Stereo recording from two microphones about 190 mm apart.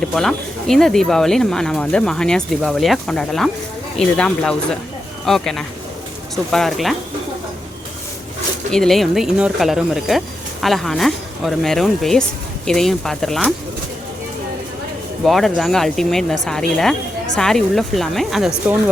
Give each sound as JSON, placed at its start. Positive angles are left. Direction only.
{"t": 0.1, "sound": "speech", "side_deg": 0}
{"t": 8.7, "sound": "speech", "side_deg": 0}
{"t": 15.2, "sound": "speech", "side_deg": 0}